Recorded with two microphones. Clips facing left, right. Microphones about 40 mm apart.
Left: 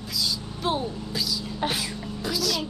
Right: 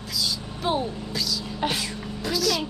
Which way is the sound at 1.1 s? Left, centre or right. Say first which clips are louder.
Even; centre.